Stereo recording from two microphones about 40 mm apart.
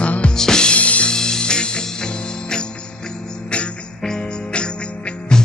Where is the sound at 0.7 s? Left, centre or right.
Left.